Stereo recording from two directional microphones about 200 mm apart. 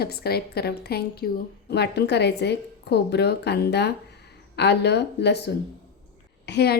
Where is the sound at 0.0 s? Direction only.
50° left (ahead or behind).